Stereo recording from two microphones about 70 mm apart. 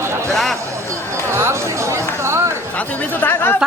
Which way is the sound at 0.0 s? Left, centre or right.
Right.